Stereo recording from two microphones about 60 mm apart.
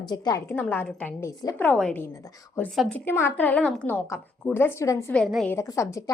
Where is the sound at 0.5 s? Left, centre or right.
Left.